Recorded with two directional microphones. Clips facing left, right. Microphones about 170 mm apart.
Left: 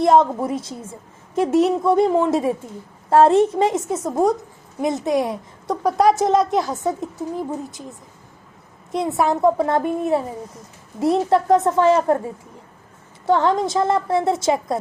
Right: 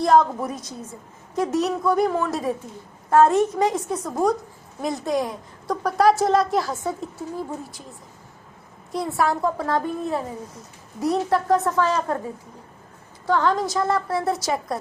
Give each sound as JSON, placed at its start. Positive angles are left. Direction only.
{"t": 0.0, "sound": "a woman's voice", "side_deg": 25}
{"t": 13.2, "sound": "a woman's voice", "side_deg": 25}